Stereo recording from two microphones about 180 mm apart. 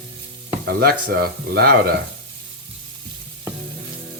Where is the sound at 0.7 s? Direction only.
60° right (ahead or behind).